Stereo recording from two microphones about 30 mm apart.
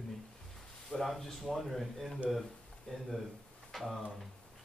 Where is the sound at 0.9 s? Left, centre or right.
Centre.